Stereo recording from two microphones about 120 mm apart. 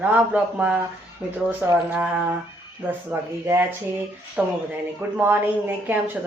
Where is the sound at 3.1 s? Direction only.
15° right (ahead or behind).